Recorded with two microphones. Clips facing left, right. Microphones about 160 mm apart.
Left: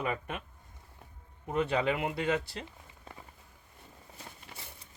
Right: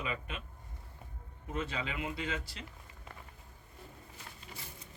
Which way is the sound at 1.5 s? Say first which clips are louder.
Left 9 dB; 65° left (ahead or behind).